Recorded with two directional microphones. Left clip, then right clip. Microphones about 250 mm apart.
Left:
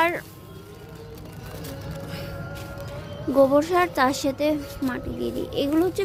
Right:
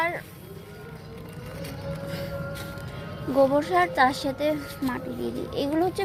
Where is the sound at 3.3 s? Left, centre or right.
Left.